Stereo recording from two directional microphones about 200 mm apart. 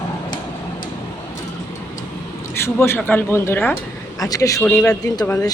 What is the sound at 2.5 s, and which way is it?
Speech, 10° left (ahead or behind).